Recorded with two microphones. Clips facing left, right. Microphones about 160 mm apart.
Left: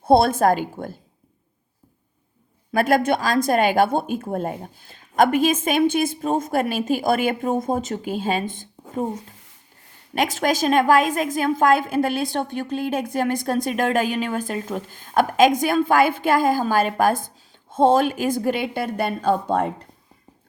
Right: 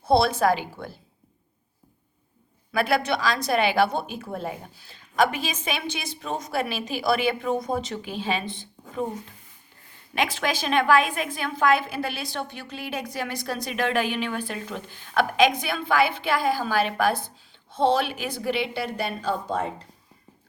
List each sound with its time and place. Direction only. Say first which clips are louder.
0.0 s a woman's voice: left 4 dB; 50° left (ahead or behind)
2.7 s a woman's voice: left 5 dB; 45° left (ahead or behind)
10.2 s a woman's voice: left 5 dB; 45° left (ahead or behind)